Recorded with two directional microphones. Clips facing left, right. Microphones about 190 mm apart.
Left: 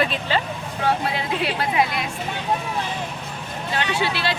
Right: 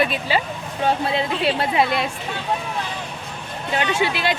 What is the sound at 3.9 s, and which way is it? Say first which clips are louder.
Speech: right 2 dB; 15° right (ahead or behind).